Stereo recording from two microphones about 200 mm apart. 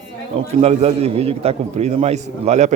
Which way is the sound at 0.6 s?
30° right (ahead or behind).